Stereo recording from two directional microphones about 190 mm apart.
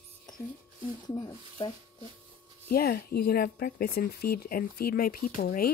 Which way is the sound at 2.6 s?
55° left (ahead or behind).